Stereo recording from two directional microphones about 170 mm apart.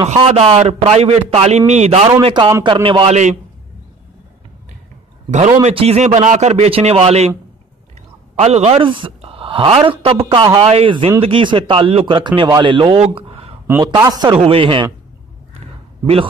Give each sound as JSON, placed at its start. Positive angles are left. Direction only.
{"t": 0.0, "sound": "speech", "side_deg": -40}
{"t": 2.2, "sound": "a man's voice", "side_deg": -25}
{"t": 5.3, "sound": "speech", "side_deg": -45}
{"t": 8.4, "sound": "speech", "side_deg": -40}
{"t": 13.7, "sound": "a man's voice", "side_deg": -15}